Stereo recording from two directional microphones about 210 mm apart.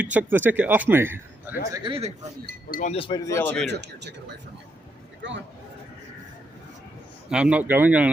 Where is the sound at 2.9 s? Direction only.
25° left (ahead or behind).